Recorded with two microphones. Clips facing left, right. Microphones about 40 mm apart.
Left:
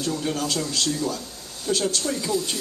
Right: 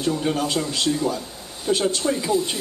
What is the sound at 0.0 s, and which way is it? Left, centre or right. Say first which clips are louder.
A woman's voice: right 4 dB; right.